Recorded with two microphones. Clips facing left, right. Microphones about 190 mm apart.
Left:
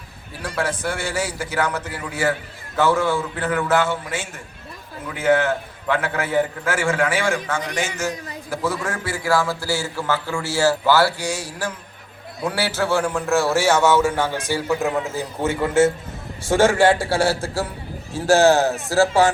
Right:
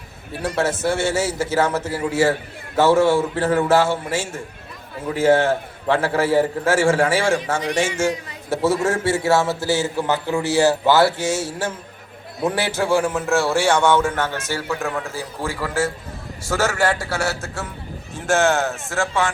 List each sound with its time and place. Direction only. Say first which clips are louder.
0.4 s a man's voice: right 4 dB; 25° right (ahead or behind); by 19.3 s 35° left (ahead or behind)